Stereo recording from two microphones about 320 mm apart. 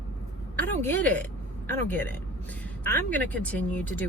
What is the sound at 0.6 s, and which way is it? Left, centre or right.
Speech, centre.